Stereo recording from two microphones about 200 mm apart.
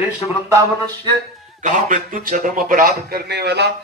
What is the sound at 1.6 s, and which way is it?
A man's voice, 40° right (ahead or behind).